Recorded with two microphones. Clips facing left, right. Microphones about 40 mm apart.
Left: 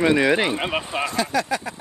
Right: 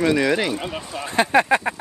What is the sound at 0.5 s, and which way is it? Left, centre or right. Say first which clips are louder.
Speech: left 4 dB; left.